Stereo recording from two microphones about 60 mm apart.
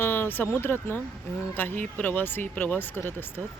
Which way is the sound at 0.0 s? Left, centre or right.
Left.